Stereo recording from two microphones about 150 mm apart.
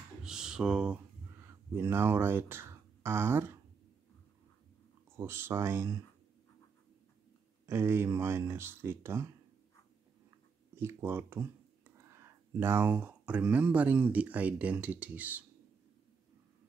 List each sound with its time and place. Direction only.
0.2 s a sound: 5° right (ahead or behind)
5.1 s speech: 15° right (ahead or behind)
7.6 s speech: 15° right (ahead or behind)
10.8 s speech: 15° right (ahead or behind)